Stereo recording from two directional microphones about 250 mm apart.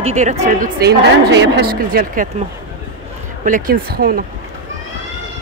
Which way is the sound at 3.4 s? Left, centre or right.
Right.